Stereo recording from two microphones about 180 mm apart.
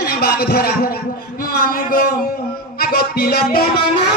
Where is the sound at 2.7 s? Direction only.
60° left (ahead or behind).